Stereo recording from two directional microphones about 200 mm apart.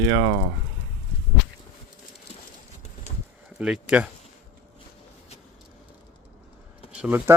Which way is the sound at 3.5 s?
5° right (ahead or behind).